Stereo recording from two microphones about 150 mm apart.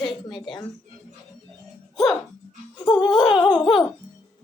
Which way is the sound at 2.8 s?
30° left (ahead or behind).